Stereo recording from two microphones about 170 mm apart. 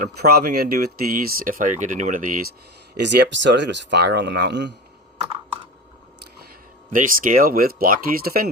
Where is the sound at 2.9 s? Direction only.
85° right.